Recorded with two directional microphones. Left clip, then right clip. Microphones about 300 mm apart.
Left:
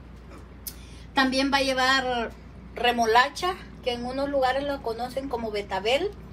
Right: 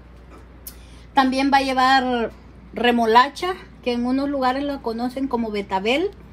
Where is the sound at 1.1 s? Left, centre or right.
Centre.